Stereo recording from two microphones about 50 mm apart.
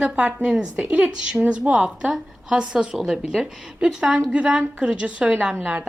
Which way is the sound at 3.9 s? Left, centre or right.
Centre.